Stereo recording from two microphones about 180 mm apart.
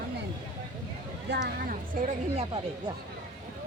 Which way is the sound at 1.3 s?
50° right (ahead or behind).